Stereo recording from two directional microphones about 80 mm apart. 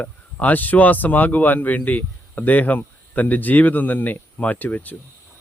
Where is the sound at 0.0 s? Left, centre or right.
Left.